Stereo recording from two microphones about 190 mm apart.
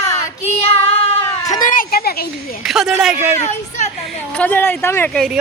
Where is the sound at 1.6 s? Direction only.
45° left (ahead or behind).